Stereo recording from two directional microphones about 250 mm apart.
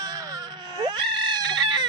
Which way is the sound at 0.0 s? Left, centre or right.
Centre.